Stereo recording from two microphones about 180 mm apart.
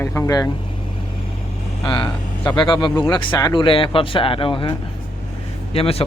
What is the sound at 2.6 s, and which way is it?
Speech, 25° left (ahead or behind).